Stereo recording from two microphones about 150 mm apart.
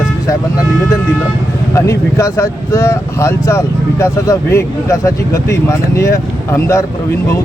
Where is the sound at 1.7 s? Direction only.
20° left (ahead or behind).